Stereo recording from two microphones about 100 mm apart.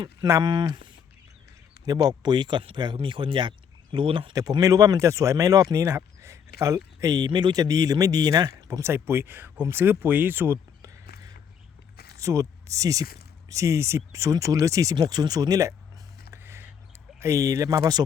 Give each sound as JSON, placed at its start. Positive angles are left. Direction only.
{"t": 0.4, "sound": "speech", "side_deg": -45}
{"t": 1.8, "sound": "speech", "side_deg": -40}
{"t": 4.4, "sound": "speech", "side_deg": -35}
{"t": 7.3, "sound": "speech", "side_deg": -50}
{"t": 10.8, "sound": "crow", "side_deg": -35}
{"t": 12.1, "sound": "speech", "side_deg": -30}
{"t": 16.3, "sound": "a sound", "side_deg": -25}
{"t": 17.2, "sound": "speech", "side_deg": -30}